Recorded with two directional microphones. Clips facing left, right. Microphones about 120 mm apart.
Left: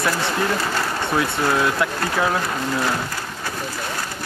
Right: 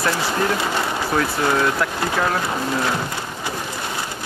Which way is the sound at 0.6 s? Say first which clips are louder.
Right 1 dB; 15° right (ahead or behind).